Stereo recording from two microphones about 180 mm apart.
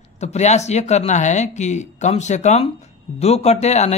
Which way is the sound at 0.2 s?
40° left (ahead or behind).